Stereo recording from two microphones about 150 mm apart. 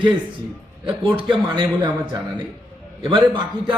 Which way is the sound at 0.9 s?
30° right (ahead or behind).